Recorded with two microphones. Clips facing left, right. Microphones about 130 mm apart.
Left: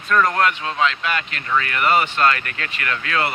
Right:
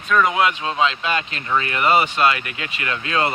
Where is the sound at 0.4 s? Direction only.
20° right (ahead or behind).